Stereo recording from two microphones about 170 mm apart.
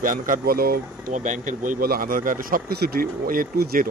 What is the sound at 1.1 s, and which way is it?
Speech, 45° right (ahead or behind).